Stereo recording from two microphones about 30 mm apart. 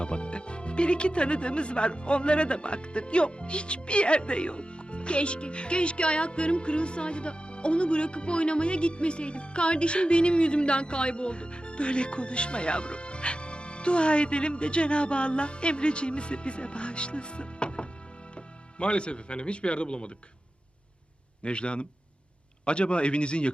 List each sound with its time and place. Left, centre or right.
0.0 s speech: left
21.4 s speech: left